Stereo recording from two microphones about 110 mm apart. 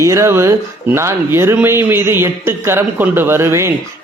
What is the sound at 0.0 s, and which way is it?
A man's voice, 25° right (ahead or behind).